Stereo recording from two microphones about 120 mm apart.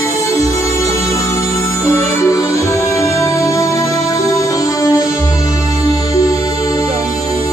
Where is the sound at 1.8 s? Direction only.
25° left (ahead or behind).